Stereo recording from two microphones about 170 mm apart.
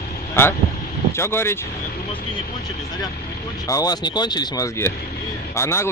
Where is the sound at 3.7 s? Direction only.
20° left (ahead or behind).